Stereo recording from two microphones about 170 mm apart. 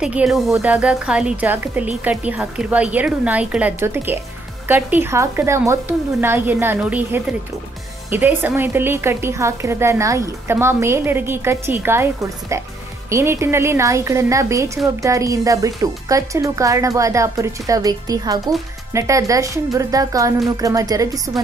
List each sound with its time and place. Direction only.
0.0 s a woman's voice: 5° right (ahead or behind); by 21.4 s 20° right (ahead or behind)